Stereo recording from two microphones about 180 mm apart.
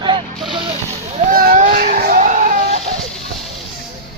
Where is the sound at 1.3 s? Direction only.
50° right (ahead or behind).